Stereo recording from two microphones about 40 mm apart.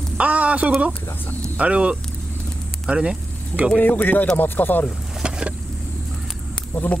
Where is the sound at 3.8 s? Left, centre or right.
Left.